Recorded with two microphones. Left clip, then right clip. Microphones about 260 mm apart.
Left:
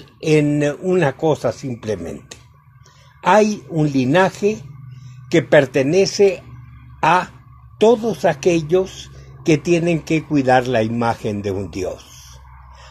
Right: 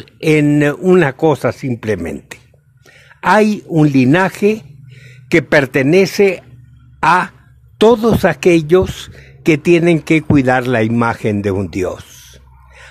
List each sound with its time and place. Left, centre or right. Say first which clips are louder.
0.0 s speech: right 3 dB; right
7.0 s a sound: right 4 dB; right
7.8 s speech: right 4 dB; right